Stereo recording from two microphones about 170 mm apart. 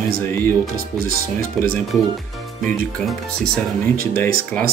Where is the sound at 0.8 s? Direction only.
60° right (ahead or behind).